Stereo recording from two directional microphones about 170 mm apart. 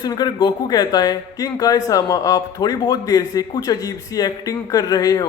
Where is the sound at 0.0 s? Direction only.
25° left (ahead or behind).